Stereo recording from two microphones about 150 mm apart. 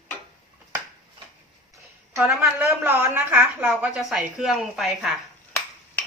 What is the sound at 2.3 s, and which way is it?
Speech, 15° right (ahead or behind).